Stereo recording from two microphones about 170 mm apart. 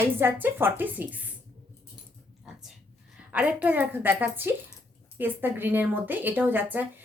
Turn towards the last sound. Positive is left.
turn(degrees=-10)  # may be behind; listen again after turning